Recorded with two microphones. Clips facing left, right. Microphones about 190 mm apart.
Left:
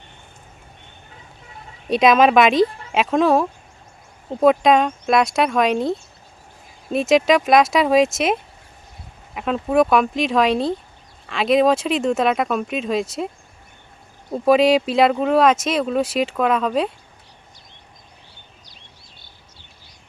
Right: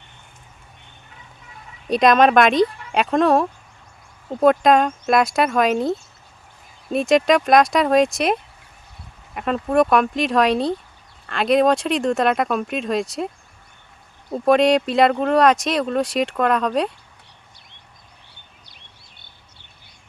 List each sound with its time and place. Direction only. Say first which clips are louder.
1.9 s speech: even; centre (ahead or behind)
14.3 s speech: left 1 dB; centre (ahead or behind)